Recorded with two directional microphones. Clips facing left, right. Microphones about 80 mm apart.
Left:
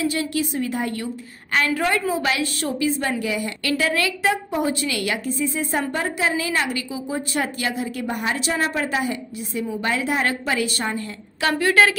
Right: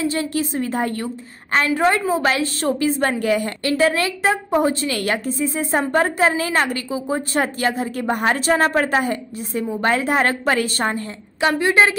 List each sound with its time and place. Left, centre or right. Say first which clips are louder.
0.0 s a woman's voice: right 2 dB; right
3.6 s a woman's voice: right 3 dB; right
11.4 s a woman's voice: right 2 dB; right